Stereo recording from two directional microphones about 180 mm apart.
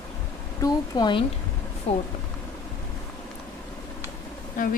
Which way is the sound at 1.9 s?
35° left (ahead or behind).